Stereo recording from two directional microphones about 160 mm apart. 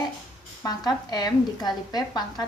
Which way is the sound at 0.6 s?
25° left (ahead or behind).